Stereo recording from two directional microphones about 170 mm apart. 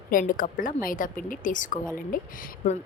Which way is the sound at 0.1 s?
55° left (ahead or behind).